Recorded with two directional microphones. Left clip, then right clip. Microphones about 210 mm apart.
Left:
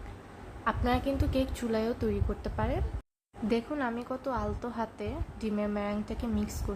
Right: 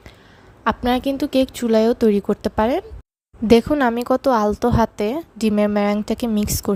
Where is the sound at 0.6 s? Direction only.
50° right (ahead or behind).